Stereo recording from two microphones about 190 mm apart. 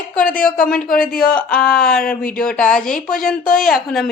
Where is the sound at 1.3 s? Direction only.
5° left (ahead or behind).